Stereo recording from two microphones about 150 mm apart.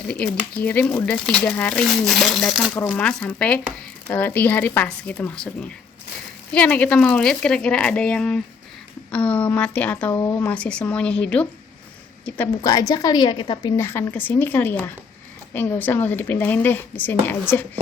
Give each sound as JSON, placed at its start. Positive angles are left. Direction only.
{"t": 0.1, "sound": "speech", "side_deg": 10}
{"t": 2.7, "sound": "speech", "side_deg": 10}
{"t": 12.6, "sound": "a woman's voice", "side_deg": 25}